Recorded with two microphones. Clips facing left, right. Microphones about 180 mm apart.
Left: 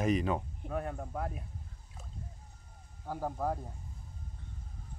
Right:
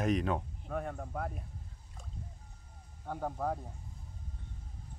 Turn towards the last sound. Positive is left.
turn(degrees=5)  # may be behind; listen again after turning